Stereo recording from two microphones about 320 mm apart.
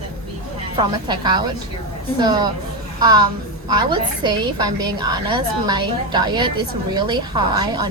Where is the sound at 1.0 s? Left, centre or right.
Centre.